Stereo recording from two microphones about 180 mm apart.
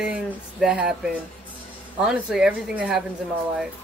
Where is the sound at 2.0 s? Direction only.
5° right (ahead or behind).